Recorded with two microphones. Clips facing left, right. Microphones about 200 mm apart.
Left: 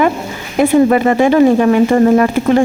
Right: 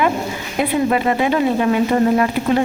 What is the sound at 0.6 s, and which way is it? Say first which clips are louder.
Speech: left 8 dB; 45° left (ahead or behind).